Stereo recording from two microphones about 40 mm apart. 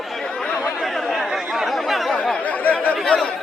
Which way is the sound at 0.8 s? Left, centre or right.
Centre.